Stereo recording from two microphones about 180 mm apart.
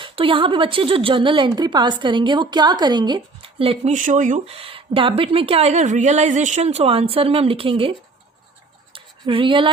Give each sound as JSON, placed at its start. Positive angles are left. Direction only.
{"t": 0.0, "sound": "a woman's voice", "side_deg": -30}
{"t": 3.9, "sound": "speech", "side_deg": -45}
{"t": 4.5, "sound": "a woman's voice", "side_deg": -30}
{"t": 6.7, "sound": "a woman's voice", "side_deg": -30}
{"t": 8.9, "sound": "a sound", "side_deg": -30}